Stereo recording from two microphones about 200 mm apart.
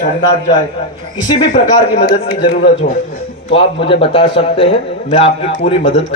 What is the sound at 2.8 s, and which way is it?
Speech, 55° left (ahead or behind).